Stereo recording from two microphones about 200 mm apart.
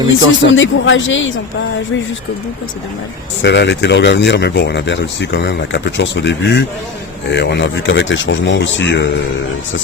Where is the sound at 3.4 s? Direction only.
60° left (ahead or behind).